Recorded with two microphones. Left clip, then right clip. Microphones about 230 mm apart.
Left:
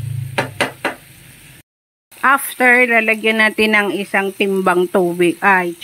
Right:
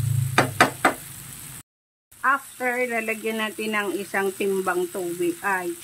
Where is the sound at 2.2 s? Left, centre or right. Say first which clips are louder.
Left 10 dB; left.